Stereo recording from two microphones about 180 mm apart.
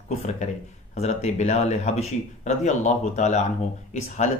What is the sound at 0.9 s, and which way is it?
Speech, 40° left (ahead or behind).